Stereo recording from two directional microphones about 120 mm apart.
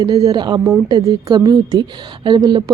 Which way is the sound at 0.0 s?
30° right (ahead or behind).